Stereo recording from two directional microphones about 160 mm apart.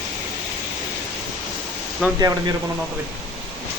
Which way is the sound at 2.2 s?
25° right (ahead or behind).